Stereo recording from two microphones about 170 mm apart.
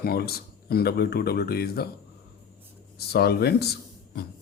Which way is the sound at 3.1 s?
70° left (ahead or behind).